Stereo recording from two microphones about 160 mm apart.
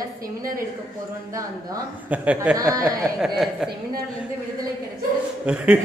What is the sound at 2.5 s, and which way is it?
Speech, 20° right (ahead or behind).